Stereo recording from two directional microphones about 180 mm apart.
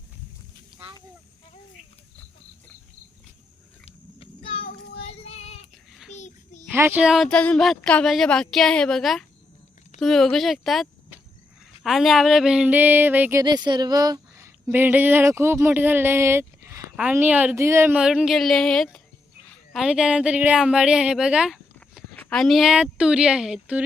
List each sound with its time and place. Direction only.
4.2 s child singing: 30° left (ahead or behind)
6.7 s a woman's voice: 10° right (ahead or behind)
13.4 s a woman's voice: 25° right (ahead or behind); by 23.8 s 5° right (ahead or behind)